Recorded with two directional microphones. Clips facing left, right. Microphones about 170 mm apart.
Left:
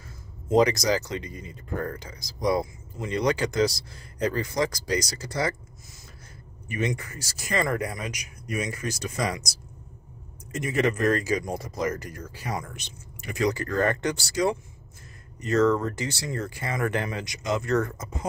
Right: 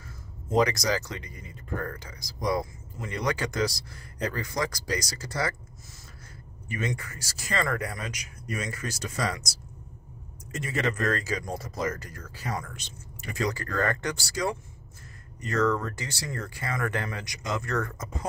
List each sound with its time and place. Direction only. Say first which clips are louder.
0.6 s speech: left 3 dB; 20° left (ahead or behind)
10.6 s speech: left 5 dB; 15° left (ahead or behind)